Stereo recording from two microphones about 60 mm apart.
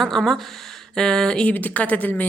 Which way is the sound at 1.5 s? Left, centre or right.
Left.